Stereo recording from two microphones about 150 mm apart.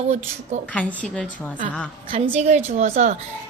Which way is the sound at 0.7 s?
10° left (ahead or behind).